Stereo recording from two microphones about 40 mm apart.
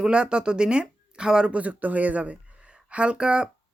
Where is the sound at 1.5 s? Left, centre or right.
Right.